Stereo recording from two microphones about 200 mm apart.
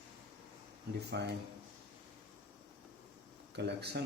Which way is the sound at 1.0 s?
60° right (ahead or behind).